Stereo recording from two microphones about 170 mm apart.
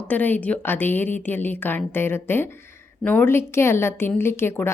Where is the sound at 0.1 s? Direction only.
10° left (ahead or behind).